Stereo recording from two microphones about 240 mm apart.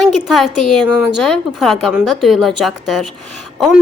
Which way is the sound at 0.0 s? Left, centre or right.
Centre.